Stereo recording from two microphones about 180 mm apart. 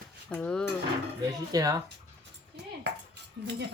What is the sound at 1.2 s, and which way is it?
Speech, 20° right (ahead or behind).